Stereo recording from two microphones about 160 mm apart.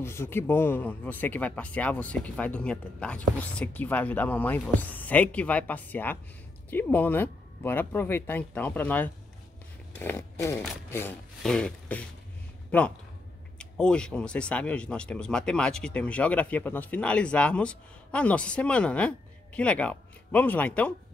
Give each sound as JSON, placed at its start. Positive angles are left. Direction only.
{"t": 0.0, "sound": "speech", "side_deg": 15}
{"t": 11.4, "sound": "a sound", "side_deg": 5}
{"t": 12.7, "sound": "speech", "side_deg": 10}